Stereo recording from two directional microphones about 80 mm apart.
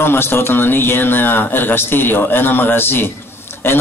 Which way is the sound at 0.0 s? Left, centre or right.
Left.